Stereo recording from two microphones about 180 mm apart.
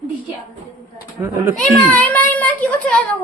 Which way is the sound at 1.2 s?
15° right (ahead or behind).